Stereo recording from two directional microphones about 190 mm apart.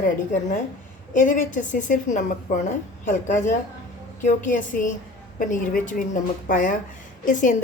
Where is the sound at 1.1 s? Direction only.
45° left (ahead or behind).